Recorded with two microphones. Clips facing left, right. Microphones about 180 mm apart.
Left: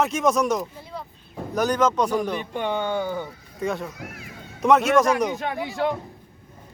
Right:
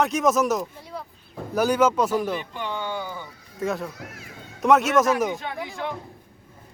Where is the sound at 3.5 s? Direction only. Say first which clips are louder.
Even; centre (ahead or behind).